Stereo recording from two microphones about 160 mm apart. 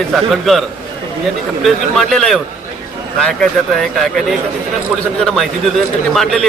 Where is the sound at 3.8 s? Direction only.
Centre (ahead or behind).